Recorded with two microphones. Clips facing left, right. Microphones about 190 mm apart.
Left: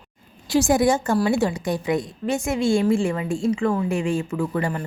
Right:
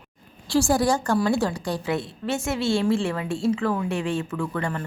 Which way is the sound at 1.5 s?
15° left (ahead or behind).